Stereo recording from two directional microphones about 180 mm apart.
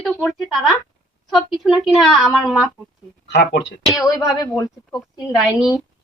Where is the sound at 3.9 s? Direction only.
20° left (ahead or behind).